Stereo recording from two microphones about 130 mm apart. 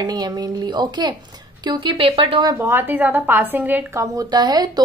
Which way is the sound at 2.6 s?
15° right (ahead or behind).